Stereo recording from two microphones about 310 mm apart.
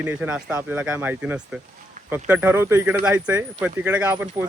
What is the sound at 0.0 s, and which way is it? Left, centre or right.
Speech, centre.